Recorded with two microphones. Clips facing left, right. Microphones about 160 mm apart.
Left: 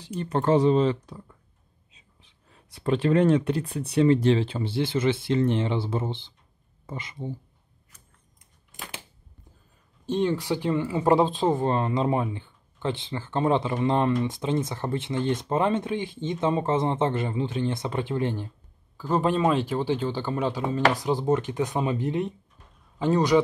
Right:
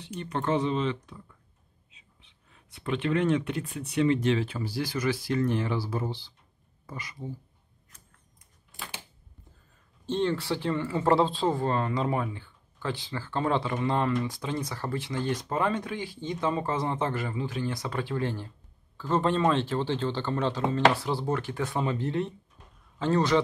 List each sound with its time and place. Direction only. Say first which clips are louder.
0.2 s speech: left 6 dB; 35° left (ahead or behind)
10.0 s speech: left 3 dB; 15° left (ahead or behind)